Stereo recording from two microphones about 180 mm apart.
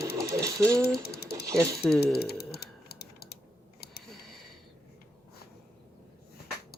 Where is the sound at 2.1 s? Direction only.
60° left (ahead or behind).